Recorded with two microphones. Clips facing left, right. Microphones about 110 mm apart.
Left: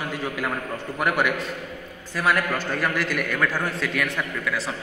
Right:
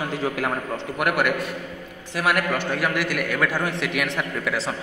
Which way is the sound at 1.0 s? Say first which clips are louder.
Right 1 dB; 5° right (ahead or behind).